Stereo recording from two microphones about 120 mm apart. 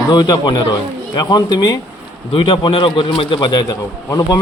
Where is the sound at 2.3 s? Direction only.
45° left (ahead or behind).